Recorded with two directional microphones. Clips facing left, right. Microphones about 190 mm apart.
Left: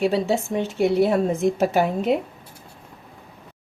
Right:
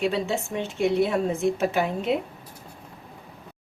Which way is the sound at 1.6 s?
40° left (ahead or behind).